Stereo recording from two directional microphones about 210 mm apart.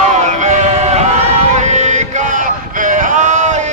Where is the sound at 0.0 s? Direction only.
35° right (ahead or behind).